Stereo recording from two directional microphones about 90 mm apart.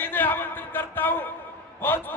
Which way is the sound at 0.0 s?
20° left (ahead or behind).